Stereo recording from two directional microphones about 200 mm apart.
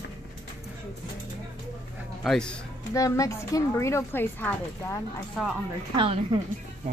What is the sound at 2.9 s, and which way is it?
Speech, 15° left (ahead or behind).